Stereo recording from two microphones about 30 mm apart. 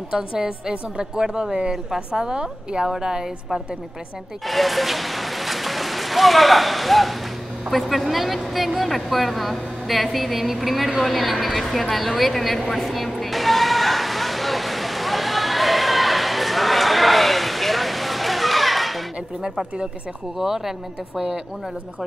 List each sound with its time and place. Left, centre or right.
0.1 s a woman's voice: right
4.5 s speech: centre
12.7 s a sound: centre
20.3 s speech: centre